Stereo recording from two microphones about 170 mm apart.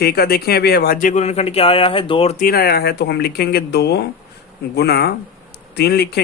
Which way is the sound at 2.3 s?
55° left (ahead or behind).